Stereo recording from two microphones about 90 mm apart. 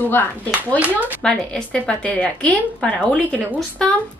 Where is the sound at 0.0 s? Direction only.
20° left (ahead or behind).